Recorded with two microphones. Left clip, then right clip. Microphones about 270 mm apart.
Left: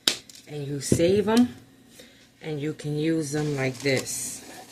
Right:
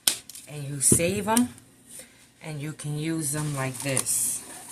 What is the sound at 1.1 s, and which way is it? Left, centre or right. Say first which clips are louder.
Speech: left 3 dB; right.